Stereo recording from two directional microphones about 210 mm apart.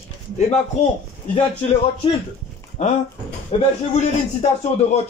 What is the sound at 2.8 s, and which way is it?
A man's voice, 35° left (ahead or behind).